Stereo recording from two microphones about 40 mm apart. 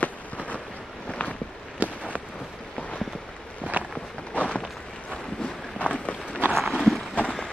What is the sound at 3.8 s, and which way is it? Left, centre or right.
Walk, right.